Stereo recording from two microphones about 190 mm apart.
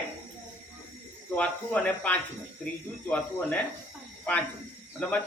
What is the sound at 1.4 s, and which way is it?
Speech, 5° left (ahead or behind).